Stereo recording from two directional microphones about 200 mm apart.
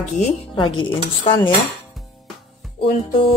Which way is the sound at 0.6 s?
25° left (ahead or behind).